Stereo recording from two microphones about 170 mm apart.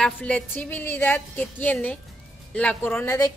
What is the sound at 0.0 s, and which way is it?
A woman's voice, 10° left (ahead or behind).